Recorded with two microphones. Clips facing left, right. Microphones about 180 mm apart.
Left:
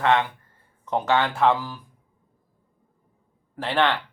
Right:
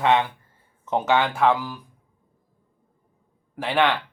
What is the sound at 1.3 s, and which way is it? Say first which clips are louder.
Speech: even; centre (ahead or behind).